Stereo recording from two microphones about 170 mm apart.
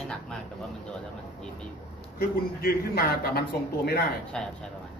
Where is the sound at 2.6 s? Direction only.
65° left (ahead or behind).